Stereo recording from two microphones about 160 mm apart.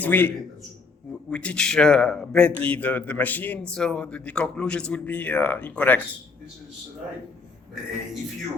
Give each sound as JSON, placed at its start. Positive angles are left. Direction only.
{"t": 0.0, "sound": "a man's voice", "side_deg": 10}